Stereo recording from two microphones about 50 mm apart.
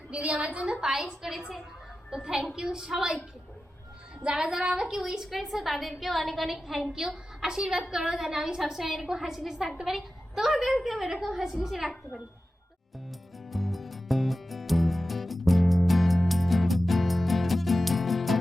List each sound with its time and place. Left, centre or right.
0.1 s a woman's voice: right; by 3.2 s centre
4.2 s a woman's voice: centre
13.5 s music: centre